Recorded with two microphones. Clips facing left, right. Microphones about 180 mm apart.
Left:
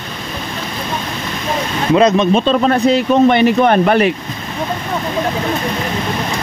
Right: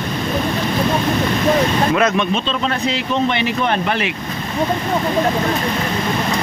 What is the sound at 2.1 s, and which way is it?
Speech, 45° left (ahead or behind).